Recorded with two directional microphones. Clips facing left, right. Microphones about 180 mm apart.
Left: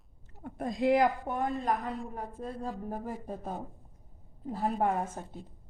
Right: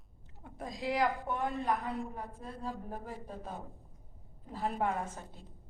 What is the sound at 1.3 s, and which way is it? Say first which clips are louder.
Speech: left 2 dB; 40° left (ahead or behind).